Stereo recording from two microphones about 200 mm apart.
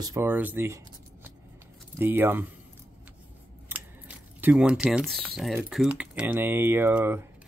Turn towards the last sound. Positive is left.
turn(degrees=-10)  # may be behind; listen again after turning